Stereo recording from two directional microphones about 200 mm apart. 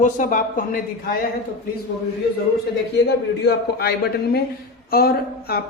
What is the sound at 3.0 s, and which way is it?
A man's voice, 50° left (ahead or behind).